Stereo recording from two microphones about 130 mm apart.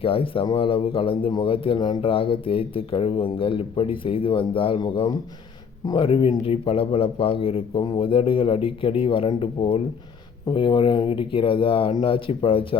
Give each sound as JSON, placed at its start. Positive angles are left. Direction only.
{"t": 0.0, "sound": "a man's voice", "side_deg": 45}